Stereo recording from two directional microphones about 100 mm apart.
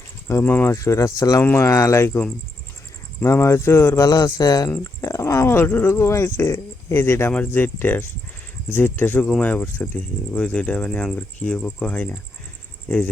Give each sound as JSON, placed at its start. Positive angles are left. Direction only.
{"t": 0.3, "sound": "speech", "side_deg": 20}
{"t": 0.7, "sound": "speech", "side_deg": 30}
{"t": 1.4, "sound": "speech", "side_deg": 20}
{"t": 3.2, "sound": "speech", "side_deg": 30}
{"t": 4.1, "sound": "speech", "side_deg": 40}